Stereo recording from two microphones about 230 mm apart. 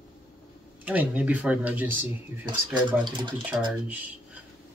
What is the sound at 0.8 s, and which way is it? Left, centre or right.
Speech, centre.